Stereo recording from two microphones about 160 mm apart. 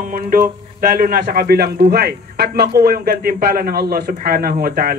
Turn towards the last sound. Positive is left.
turn(degrees=-65)  # may be behind; listen again after turning